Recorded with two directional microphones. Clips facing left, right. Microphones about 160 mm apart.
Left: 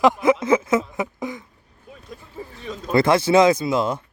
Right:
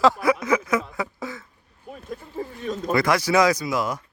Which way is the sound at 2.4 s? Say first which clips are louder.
Right 4 dB; 50° right (ahead or behind).